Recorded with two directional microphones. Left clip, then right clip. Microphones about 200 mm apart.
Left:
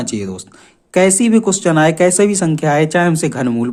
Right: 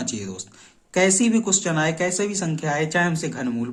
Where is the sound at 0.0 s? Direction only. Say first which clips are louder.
Left 8 dB; 40° left (ahead or behind).